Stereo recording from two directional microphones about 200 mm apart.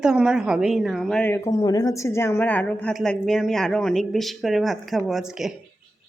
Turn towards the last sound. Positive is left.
turn(degrees=0)  # may be behind; listen again after turning